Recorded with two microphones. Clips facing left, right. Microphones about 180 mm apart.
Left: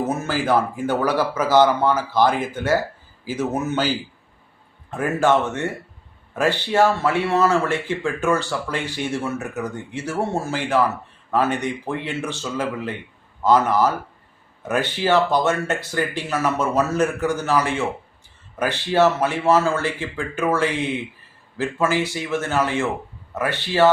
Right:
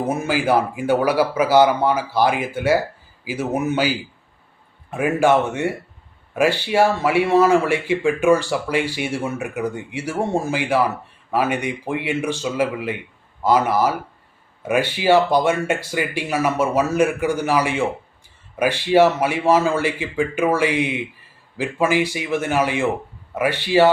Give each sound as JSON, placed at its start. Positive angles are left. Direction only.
{"t": 0.1, "sound": "speech", "side_deg": -10}